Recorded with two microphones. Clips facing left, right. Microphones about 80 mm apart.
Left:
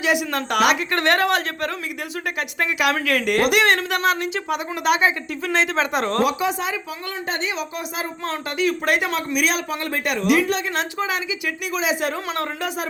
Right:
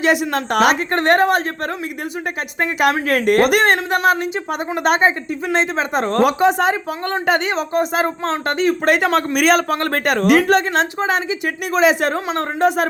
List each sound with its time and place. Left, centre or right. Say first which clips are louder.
0.0 s speech: right 4 dB; right
2.6 s speech: right 5 dB; right
3.7 s speech: right 4 dB; right
4.8 s speech: right 4 dB; right
5.7 s speech: right 3 dB; right
6.2 s speech: right 7 dB; right
7.5 s speech: right 10 dB; right
12.3 s speech: right 8 dB; right